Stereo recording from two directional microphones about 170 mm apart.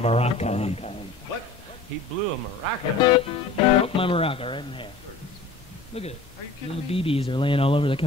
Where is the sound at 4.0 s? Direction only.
30° left (ahead or behind).